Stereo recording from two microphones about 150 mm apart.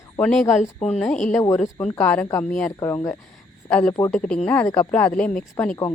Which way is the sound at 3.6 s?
20° left (ahead or behind).